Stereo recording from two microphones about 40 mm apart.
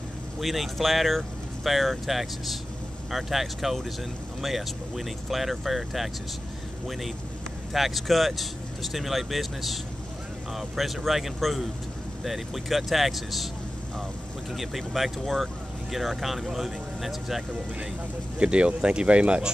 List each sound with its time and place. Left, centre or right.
0.4 s speech: centre
7.7 s speech: centre
14.5 s speech: centre
18.4 s speech: right